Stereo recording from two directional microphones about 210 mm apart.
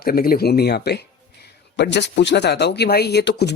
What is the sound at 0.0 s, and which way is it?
Speech, 45° left (ahead or behind).